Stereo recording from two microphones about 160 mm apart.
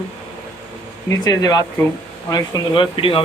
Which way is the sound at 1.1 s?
20° left (ahead or behind).